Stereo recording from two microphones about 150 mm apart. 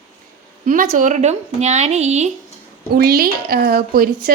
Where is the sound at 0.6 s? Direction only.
60° right (ahead or behind).